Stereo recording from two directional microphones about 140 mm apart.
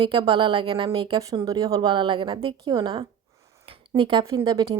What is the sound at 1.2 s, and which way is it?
Speech, 25° right (ahead or behind).